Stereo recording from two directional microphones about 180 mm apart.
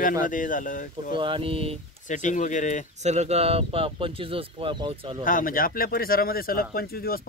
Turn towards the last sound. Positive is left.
turn(degrees=55)  # may be behind; listen again after turning